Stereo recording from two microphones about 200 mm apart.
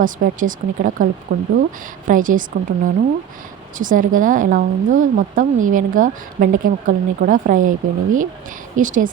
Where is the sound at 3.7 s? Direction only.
40° right (ahead or behind).